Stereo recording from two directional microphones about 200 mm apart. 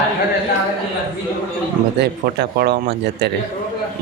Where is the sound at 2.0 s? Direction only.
55° right (ahead or behind).